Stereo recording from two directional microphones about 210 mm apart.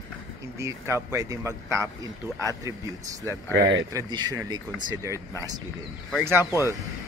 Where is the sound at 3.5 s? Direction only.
60° right (ahead or behind).